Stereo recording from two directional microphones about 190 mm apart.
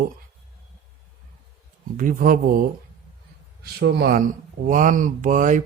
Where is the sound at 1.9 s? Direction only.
45° right (ahead or behind).